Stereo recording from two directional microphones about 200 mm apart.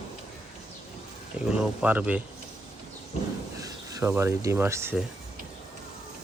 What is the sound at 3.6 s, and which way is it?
Speech, 15° right (ahead or behind).